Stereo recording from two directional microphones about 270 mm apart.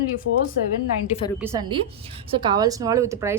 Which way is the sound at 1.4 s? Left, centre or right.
Centre.